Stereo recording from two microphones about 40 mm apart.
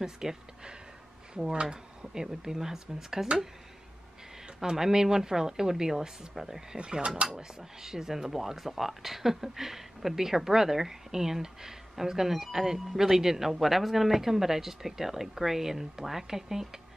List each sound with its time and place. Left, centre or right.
0.0 s speech: centre
4.6 s speech: centre
6.8 s speech: right